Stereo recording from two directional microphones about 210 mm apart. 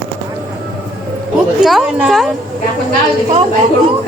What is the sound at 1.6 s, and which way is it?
Speech, centre (ahead or behind).